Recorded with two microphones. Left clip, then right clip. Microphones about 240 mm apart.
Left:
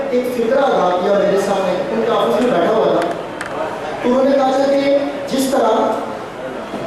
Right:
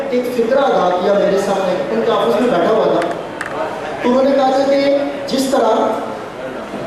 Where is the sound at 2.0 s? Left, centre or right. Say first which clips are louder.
Right 1 dB; centre.